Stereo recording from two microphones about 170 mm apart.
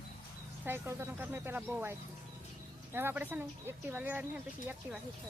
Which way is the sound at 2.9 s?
10° right (ahead or behind).